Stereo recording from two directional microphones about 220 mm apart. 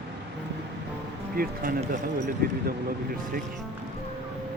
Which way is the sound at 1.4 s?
40° right (ahead or behind).